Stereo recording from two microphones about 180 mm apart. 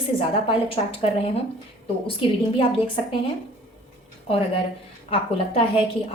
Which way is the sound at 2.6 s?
30° left (ahead or behind).